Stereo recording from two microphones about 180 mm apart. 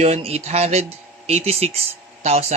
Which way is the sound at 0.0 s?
35° right (ahead or behind).